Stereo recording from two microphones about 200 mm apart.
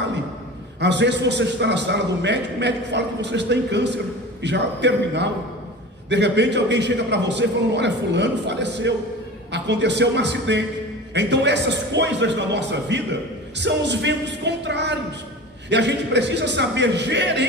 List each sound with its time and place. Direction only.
0.7 s a man's voice: 60° right (ahead or behind)